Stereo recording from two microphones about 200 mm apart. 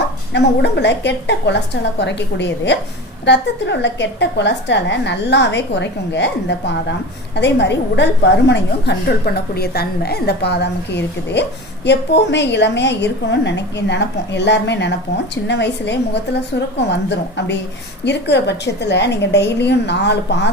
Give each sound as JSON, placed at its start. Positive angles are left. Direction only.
{"t": 0.3, "sound": "a woman's voice", "side_deg": 60}